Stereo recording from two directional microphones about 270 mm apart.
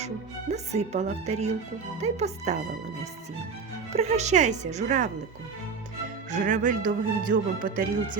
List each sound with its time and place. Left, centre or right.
0.5 s speech: right
3.9 s speech: right
6.3 s speech: right